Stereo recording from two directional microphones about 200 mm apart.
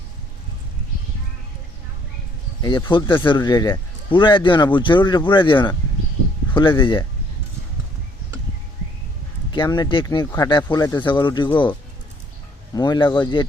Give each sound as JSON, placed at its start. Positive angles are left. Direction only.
{"t": 2.6, "sound": "speech", "side_deg": 20}
{"t": 9.5, "sound": "speech", "side_deg": 20}
{"t": 12.7, "sound": "speech", "side_deg": 20}